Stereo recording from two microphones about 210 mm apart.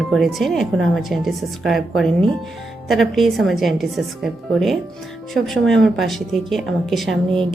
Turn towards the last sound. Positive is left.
turn(degrees=0)  # may be behind; listen again after turning